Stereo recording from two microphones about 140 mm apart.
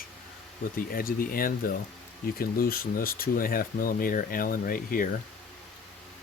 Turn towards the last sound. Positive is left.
turn(degrees=90)